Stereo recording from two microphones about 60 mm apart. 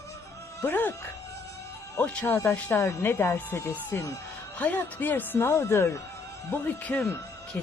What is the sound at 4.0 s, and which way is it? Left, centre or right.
Speech, left.